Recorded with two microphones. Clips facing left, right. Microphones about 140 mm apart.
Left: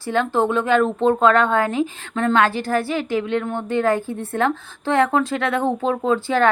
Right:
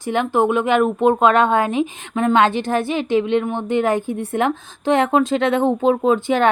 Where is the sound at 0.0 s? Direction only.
15° right (ahead or behind).